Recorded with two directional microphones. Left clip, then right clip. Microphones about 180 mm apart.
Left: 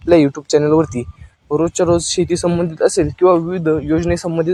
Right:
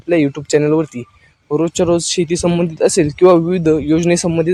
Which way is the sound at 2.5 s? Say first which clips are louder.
Right 1 dB; 20° right (ahead or behind).